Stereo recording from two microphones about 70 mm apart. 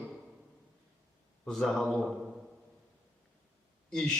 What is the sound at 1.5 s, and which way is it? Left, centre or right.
Speech, centre.